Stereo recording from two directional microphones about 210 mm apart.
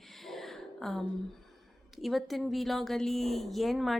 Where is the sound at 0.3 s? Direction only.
Centre (ahead or behind).